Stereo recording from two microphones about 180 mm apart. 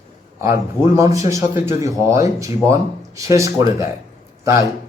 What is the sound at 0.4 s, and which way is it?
Speech, 15° right (ahead or behind).